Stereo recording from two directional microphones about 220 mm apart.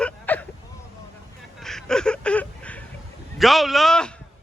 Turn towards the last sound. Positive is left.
turn(degrees=5)  # may be behind; listen again after turning